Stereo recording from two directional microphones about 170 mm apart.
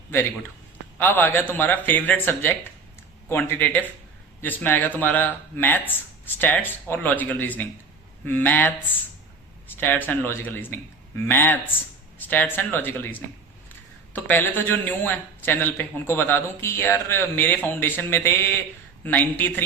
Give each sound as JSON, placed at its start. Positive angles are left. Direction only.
{"t": 0.9, "sound": "speech", "side_deg": 10}